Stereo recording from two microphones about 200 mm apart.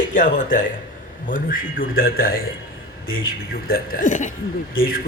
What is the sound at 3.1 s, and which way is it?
Speech, 80° left.